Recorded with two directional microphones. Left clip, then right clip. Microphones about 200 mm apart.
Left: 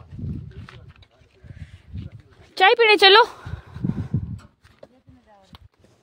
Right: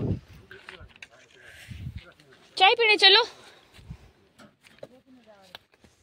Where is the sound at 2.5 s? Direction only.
50° left (ahead or behind).